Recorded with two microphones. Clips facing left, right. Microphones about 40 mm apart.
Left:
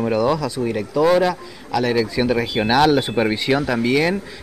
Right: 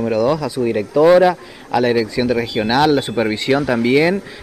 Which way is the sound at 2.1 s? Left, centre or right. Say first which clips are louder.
Right 2 dB; centre.